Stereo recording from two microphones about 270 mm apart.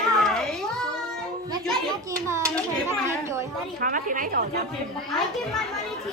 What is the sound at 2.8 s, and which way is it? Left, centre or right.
Chatter, centre.